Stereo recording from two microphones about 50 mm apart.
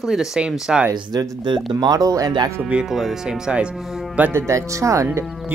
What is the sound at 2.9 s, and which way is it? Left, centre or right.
Speech, centre.